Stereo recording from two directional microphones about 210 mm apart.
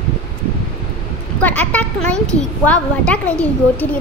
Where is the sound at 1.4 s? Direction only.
5° left (ahead or behind).